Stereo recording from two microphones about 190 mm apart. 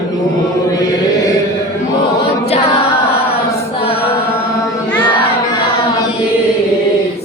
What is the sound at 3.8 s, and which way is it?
Chant, 30° left (ahead or behind).